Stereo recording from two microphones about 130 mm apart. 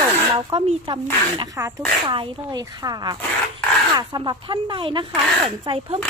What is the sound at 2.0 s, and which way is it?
A woman's voice, 40° right (ahead or behind).